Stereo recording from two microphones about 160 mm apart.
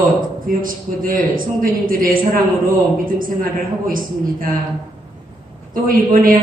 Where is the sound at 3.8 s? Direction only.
60° right (ahead or behind).